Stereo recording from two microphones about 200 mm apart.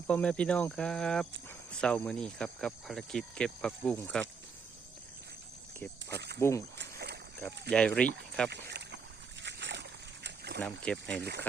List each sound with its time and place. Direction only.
0.1 s speech: 5° left (ahead or behind)
6.1 s speech: 55° right (ahead or behind)
6.7 s rowboat: 55° right (ahead or behind)
7.7 s speech: 5° left (ahead or behind)
8.4 s rowboat: 60° right (ahead or behind)
9.4 s a sound: 60° right (ahead or behind)
10.6 s speech: centre (ahead or behind)
11.2 s speech: 55° right (ahead or behind)